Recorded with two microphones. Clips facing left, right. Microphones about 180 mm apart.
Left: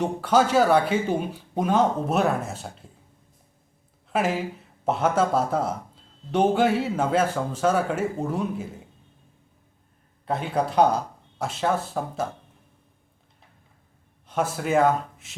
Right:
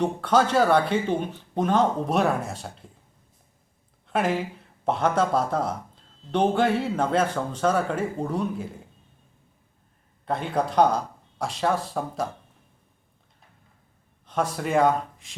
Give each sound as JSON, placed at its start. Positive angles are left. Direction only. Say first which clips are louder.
{"t": 0.0, "sound": "speech", "louder": "even", "side_deg": 5}
{"t": 4.0, "sound": "speech", "louder": "even", "side_deg": 5}
{"t": 10.2, "sound": "speech", "louder": "even", "side_deg": 5}
{"t": 14.3, "sound": "speech", "louder": "left 1 dB", "side_deg": 5}